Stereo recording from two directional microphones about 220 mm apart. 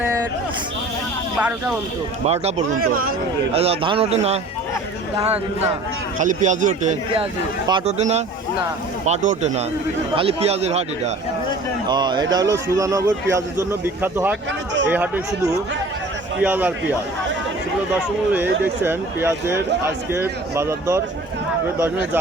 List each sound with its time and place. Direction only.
1.4 s speech: 5° right (ahead or behind)
2.2 s a man's voice: 30° right (ahead or behind); by 16.7 s 5° right (ahead or behind)
18.3 s a man's voice: 10° right (ahead or behind)